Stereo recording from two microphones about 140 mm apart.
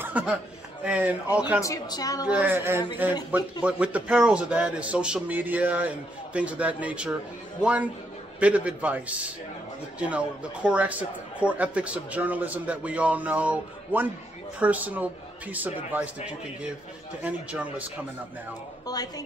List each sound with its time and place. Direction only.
0.0 s chuckle: 10° right (ahead or behind)
0.8 s a man's voice: 10° right (ahead or behind)
1.6 s a woman's voice: 25° left (ahead or behind)
2.2 s a man's voice: 10° right (ahead or behind)
17.2 s a man's voice: 10° right (ahead or behind)
18.9 s a woman's voice: 25° left (ahead or behind)